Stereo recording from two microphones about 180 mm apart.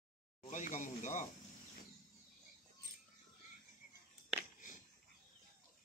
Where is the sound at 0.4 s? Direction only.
45° left (ahead or behind).